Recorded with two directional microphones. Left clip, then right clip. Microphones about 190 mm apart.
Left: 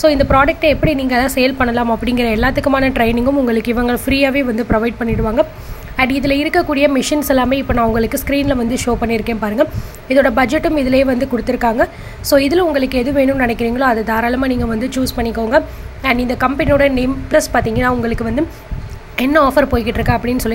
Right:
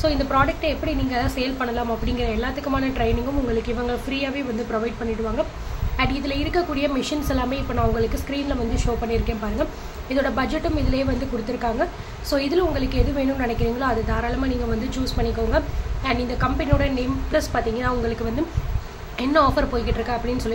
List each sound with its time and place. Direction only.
0.0 s a woman's voice: 45° left (ahead or behind)